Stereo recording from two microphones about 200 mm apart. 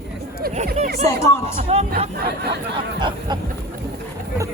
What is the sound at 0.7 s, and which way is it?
Speech, 45° right (ahead or behind).